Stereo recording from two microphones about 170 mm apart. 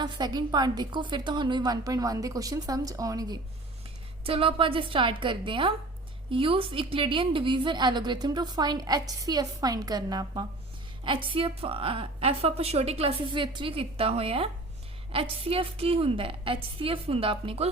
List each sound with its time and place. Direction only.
0.0 s a woman's voice: 25° right (ahead or behind)
4.2 s a woman's voice: 35° right (ahead or behind)